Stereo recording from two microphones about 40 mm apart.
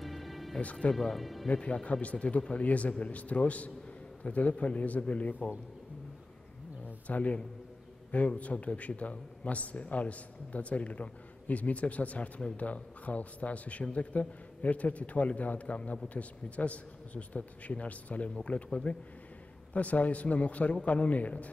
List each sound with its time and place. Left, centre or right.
0.0 s music: centre
0.9 s speech: centre
1.5 s speech: left
7.1 s speech: left